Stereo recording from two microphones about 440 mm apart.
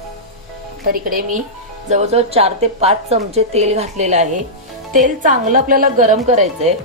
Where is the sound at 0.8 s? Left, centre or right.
Centre.